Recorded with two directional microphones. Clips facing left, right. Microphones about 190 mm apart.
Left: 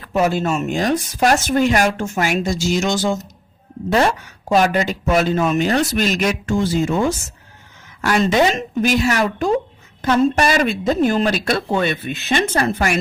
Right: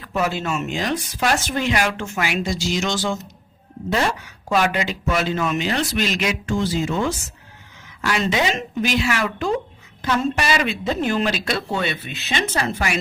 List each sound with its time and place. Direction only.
0.2 s speech: 45° left (ahead or behind)
4.4 s speech: 40° left (ahead or behind)